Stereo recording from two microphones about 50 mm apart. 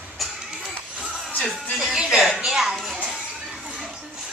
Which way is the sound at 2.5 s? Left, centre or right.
Centre.